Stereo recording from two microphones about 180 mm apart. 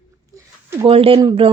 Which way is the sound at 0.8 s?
30° right (ahead or behind).